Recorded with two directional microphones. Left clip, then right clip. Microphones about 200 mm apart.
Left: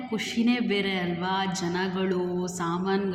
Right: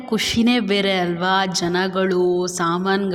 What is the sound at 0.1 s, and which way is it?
A man's voice, 50° right (ahead or behind).